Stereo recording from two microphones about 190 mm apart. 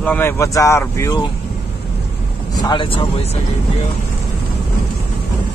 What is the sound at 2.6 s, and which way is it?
Speech, 25° left (ahead or behind).